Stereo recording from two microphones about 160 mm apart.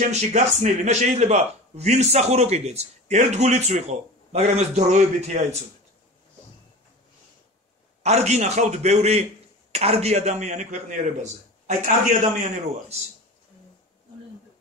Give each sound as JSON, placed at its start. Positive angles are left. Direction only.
{"t": 0.1, "sound": "a man's voice", "side_deg": -45}
{"t": 8.0, "sound": "a man's voice", "side_deg": -45}